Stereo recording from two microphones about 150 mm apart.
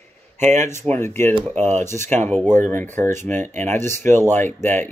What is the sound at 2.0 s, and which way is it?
Speech, 10° left (ahead or behind).